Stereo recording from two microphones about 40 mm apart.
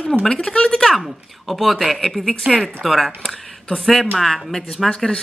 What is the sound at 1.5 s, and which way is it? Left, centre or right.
Speech, centre.